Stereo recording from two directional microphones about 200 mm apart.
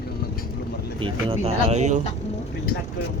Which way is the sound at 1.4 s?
35° right (ahead or behind).